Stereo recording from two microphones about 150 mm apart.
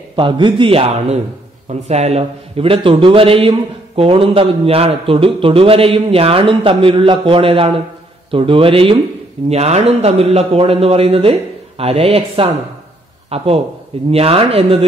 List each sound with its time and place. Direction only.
0.1 s a man's voice: 35° right (ahead or behind)